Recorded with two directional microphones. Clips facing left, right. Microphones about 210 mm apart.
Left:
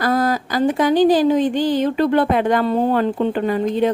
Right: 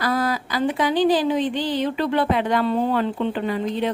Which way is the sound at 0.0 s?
45° left (ahead or behind).